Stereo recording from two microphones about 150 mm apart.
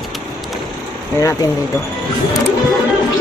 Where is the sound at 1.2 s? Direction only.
20° left (ahead or behind).